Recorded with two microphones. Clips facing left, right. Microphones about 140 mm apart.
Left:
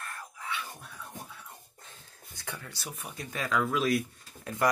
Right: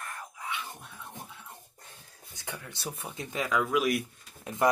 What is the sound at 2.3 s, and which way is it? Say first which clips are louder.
Speech: right 1 dB; 20° right (ahead or behind).